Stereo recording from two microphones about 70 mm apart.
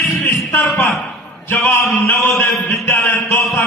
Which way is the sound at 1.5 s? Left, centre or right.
Left.